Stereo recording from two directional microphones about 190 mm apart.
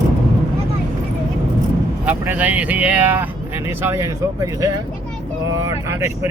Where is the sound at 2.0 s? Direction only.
10° right (ahead or behind).